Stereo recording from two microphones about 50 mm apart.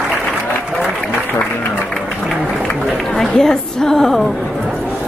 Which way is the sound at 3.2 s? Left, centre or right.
Centre.